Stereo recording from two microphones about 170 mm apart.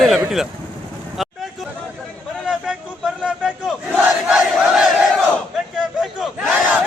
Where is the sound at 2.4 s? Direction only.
5° right (ahead or behind).